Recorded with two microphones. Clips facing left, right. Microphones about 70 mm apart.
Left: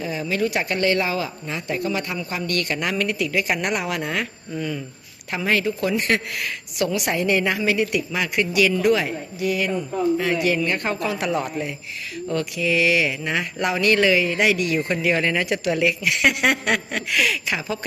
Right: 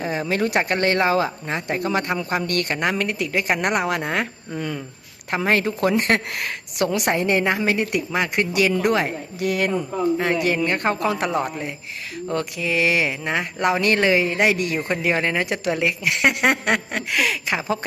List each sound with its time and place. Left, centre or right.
0.0 s speech: right
5.3 s speech: right
9.4 s speech: right
10.2 s speech: right